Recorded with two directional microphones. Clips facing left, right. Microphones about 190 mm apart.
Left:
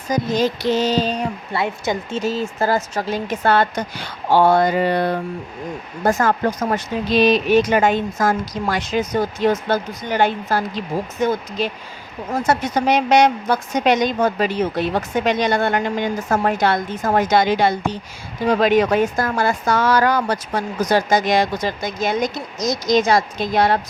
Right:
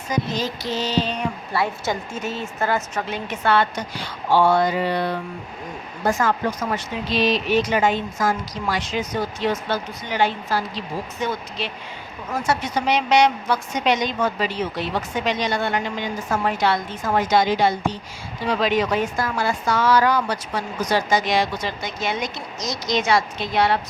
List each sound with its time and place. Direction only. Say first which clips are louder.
0.1 s a woman's voice: left 6 dB; 40° left (ahead or behind)
1.5 s a woman's voice: left 2 dB; 20° left (ahead or behind)
2.2 s a woman's voice: left 5 dB; 35° left (ahead or behind); by 17.7 s 60° left (ahead or behind)
18.4 s a woman's voice: left 5 dB; 50° left (ahead or behind)